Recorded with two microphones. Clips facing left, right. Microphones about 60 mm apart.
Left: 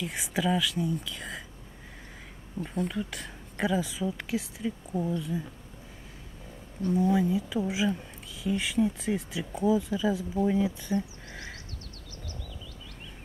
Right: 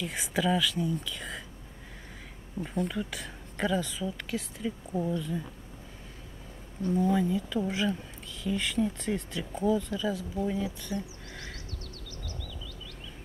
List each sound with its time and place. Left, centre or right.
0.0 s speech: centre
2.6 s speech: centre
6.9 s speech: centre
12.2 s frog: left